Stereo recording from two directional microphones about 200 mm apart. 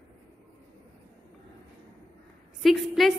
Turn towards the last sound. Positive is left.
turn(degrees=0)  # may be behind; listen again after turning